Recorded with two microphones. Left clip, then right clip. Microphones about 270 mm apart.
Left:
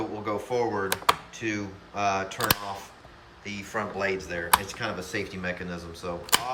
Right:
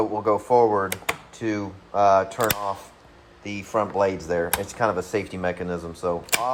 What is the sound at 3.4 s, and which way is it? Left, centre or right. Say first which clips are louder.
Speech: right 7 dB; right.